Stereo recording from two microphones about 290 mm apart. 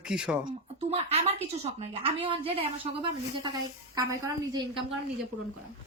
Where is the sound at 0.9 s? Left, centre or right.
Right.